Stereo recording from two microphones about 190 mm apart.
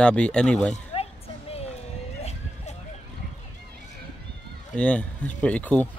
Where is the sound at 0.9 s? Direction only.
30° left (ahead or behind).